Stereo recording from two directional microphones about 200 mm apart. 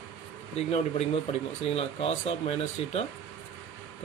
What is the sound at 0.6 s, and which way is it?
Speech, 30° left (ahead or behind).